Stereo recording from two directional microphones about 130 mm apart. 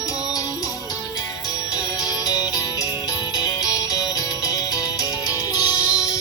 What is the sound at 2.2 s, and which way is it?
Music, 30° left (ahead or behind).